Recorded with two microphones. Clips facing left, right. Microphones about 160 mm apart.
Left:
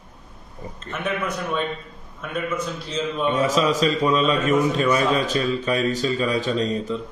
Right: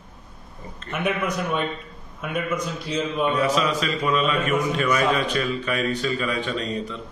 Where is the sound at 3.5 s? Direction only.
40° left (ahead or behind).